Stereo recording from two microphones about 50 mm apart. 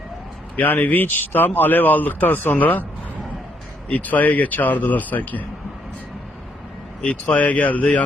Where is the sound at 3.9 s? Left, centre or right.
Left.